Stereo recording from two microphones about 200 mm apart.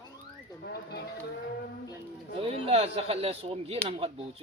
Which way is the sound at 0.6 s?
55° left (ahead or behind).